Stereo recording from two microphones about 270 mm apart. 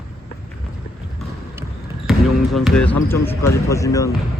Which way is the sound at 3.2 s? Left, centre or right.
Centre.